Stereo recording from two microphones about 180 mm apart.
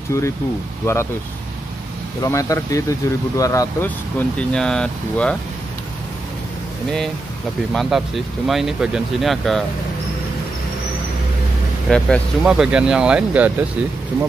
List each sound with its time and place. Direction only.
0.1 s speech: 15° left (ahead or behind)
2.2 s speech: 15° left (ahead or behind)
4.4 s speech: 5° left (ahead or behind)
7.7 s speech: centre (ahead or behind)
11.9 s speech: centre (ahead or behind)